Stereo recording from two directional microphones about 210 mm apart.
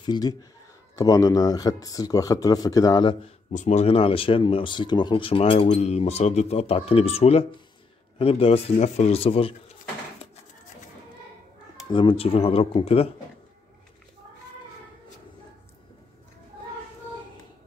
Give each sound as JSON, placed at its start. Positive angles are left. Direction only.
{"t": 0.0, "sound": "speech", "side_deg": 20}
{"t": 3.5, "sound": "speech", "side_deg": 35}
{"t": 11.9, "sound": "speech", "side_deg": 25}